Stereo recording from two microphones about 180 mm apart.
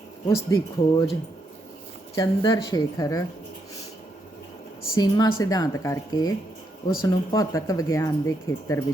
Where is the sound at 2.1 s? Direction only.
20° left (ahead or behind).